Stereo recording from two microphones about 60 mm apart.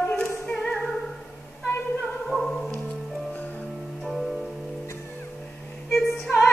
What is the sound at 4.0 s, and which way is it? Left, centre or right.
Music, centre.